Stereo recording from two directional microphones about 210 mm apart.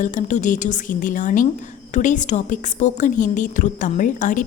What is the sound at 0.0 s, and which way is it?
A woman's voice, 35° left (ahead or behind).